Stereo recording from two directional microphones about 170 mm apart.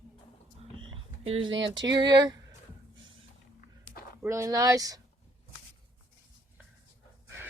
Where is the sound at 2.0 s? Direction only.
25° right (ahead or behind).